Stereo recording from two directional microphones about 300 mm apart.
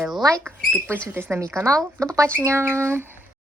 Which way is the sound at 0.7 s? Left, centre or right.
Centre.